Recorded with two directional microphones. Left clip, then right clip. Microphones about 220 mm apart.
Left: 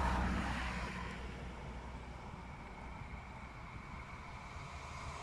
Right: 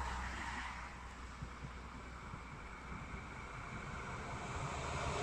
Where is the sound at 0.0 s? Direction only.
55° left (ahead or behind).